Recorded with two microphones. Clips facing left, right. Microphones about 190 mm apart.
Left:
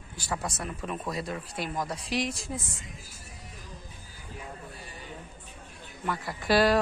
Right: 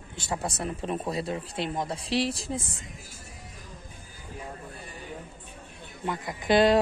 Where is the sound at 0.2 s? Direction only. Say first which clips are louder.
Right 2 dB; 25° right (ahead or behind).